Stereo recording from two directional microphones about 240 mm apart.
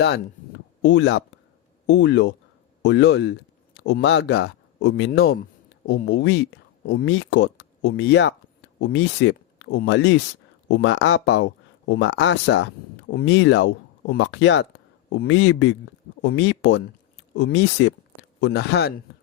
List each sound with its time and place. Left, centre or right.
0.8 s speech: left